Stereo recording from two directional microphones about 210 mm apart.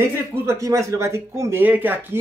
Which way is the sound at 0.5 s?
15° right (ahead or behind).